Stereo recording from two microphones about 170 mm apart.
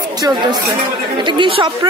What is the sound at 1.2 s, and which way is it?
Speech, 30° right (ahead or behind).